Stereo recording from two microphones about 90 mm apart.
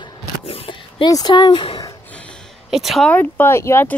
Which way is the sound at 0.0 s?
80° left.